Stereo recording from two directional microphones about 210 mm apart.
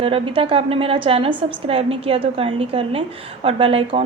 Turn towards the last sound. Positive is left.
turn(degrees=-25)  # may be behind; listen again after turning